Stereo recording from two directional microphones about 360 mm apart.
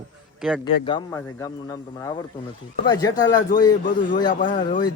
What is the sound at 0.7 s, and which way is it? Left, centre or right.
Speech, centre.